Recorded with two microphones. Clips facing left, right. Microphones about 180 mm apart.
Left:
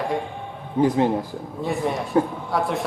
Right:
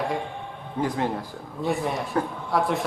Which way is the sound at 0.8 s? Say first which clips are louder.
Left 7 dB; 20° left (ahead or behind).